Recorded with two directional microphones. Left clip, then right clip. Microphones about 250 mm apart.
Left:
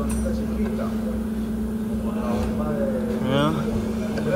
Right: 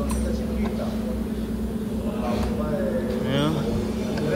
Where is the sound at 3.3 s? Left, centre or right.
Centre.